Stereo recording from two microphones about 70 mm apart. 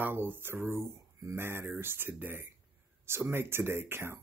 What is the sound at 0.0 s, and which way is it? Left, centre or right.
Speech, right.